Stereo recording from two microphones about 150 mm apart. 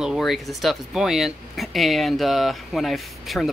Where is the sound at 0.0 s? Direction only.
Centre (ahead or behind).